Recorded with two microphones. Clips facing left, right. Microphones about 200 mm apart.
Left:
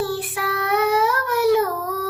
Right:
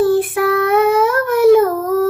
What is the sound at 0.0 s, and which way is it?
Child singing, 50° right (ahead or behind).